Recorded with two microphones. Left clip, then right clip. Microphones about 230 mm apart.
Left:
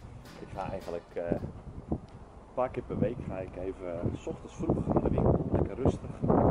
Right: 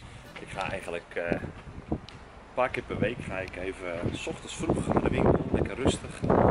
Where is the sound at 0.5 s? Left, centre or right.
Centre.